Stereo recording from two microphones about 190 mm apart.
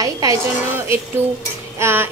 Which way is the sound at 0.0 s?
15° right (ahead or behind).